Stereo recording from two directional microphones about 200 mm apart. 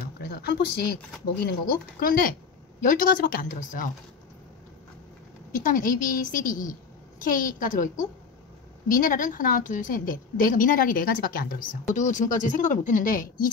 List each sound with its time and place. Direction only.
0.2 s a woman's voice: 50° left (ahead or behind)
5.5 s a woman's voice: 40° left (ahead or behind)